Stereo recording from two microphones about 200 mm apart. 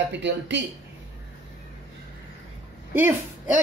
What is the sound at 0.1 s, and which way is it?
Speech, 65° right (ahead or behind).